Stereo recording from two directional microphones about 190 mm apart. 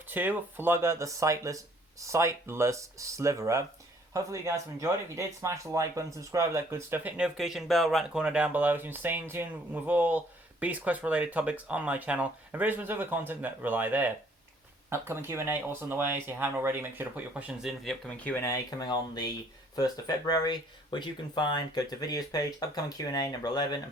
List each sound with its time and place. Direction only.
0.1 s speech: 10° right (ahead or behind); by 23.8 s 20° left (ahead or behind)